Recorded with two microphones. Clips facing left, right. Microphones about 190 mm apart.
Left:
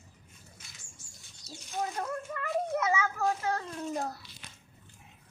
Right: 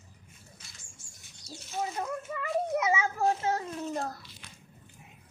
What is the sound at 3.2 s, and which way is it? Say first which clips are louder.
Speech: right 3 dB; 30° right (ahead or behind).